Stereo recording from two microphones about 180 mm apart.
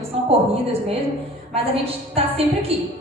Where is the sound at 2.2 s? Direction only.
30° right (ahead or behind).